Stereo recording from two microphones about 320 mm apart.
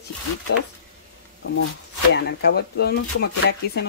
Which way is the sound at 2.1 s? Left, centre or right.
Left.